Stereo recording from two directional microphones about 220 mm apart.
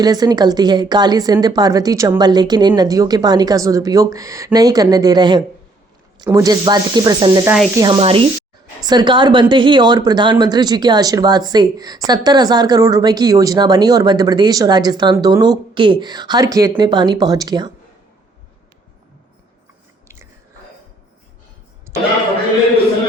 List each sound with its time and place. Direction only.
0.0 s speech: 20° right (ahead or behind)